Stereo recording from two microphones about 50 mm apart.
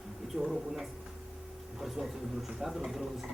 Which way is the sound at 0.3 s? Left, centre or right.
Centre.